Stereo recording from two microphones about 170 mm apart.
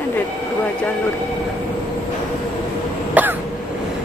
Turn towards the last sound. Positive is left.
turn(degrees=-10)  # may be behind; listen again after turning